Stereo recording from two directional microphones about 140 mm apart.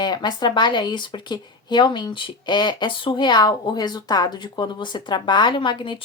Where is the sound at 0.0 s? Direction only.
30° left (ahead or behind).